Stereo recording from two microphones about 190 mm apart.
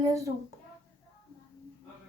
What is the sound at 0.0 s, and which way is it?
Speech, 15° right (ahead or behind).